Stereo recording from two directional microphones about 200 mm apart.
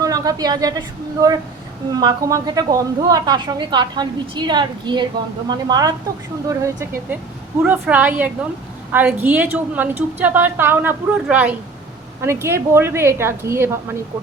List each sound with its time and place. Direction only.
0.0 s a woman's voice: 20° right (ahead or behind)